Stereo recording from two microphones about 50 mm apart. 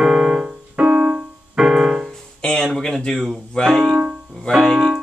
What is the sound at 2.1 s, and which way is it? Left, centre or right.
Music, centre.